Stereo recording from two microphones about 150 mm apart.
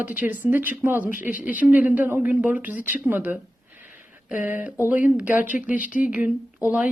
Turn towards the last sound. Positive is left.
turn(degrees=-10)  # may be behind; listen again after turning